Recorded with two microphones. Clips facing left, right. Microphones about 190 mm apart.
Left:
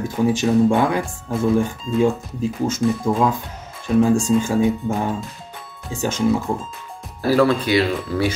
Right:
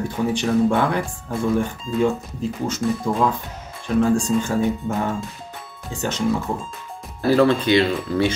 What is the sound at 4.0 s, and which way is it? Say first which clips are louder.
Speech: left 2 dB; 10° left (ahead or behind).